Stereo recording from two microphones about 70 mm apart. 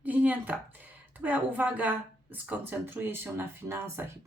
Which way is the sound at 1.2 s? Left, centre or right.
Right.